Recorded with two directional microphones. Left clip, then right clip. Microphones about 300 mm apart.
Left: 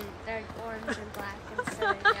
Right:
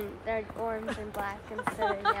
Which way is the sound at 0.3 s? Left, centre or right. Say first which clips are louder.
Right 4 dB; centre.